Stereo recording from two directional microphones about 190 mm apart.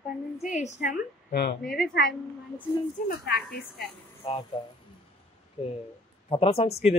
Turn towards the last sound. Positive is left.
turn(degrees=30)  # may be behind; listen again after turning